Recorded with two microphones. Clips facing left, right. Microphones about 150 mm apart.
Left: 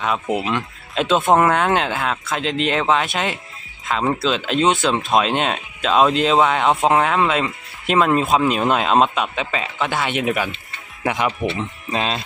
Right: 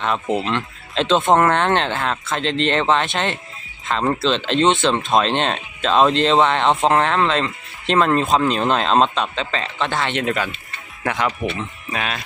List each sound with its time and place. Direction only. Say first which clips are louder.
0.0 s speech: even; 5° left (ahead or behind); by 12.2 s 25° left (ahead or behind)